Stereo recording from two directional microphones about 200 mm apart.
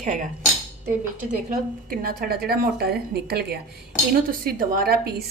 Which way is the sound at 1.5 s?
45° right (ahead or behind).